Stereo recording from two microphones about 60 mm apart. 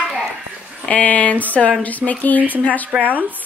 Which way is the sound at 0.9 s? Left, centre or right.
Left.